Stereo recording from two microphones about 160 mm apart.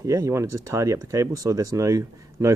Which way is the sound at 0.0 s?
20° right (ahead or behind).